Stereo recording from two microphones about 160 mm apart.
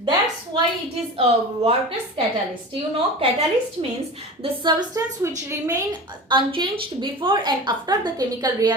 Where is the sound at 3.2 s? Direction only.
40° right (ahead or behind).